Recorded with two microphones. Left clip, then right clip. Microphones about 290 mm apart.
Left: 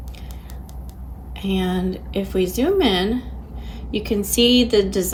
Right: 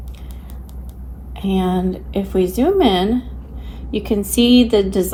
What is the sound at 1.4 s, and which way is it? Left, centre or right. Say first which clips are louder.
A woman's voice: right 4 dB; right.